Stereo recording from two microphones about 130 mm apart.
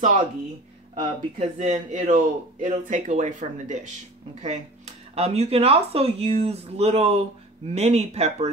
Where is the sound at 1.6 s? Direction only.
70° right (ahead or behind).